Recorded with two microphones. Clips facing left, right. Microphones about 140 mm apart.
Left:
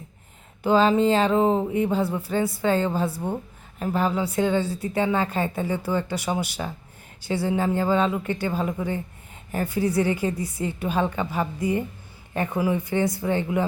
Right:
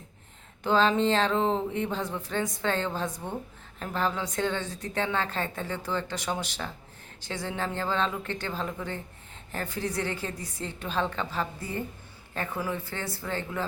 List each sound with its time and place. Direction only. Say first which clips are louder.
0.6 s a woman's voice: left 5 dB; 10° left (ahead or behind)